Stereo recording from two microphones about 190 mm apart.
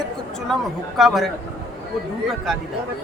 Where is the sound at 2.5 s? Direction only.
Centre (ahead or behind).